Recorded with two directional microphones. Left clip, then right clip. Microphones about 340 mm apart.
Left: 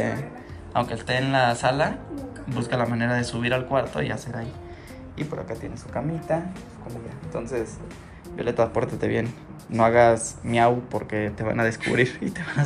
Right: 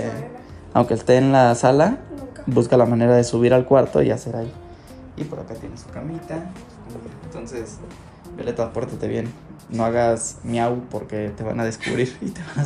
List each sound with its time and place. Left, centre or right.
0.7 s speech: right
5.2 s speech: centre